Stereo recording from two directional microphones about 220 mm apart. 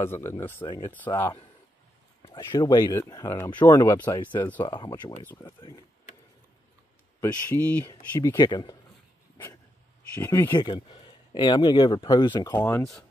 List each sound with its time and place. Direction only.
0.1 s speech: 10° left (ahead or behind)
0.7 s speech: 20° left (ahead or behind)
0.9 s speech: 10° left (ahead or behind)
7.2 s speech: 10° left (ahead or behind)
10.1 s speech: 10° left (ahead or behind)
10.7 s speech: 25° left (ahead or behind)